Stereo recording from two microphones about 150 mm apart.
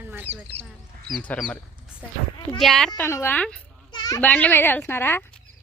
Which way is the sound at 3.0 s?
15° left (ahead or behind).